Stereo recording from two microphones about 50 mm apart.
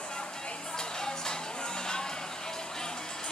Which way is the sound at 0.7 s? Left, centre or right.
Centre.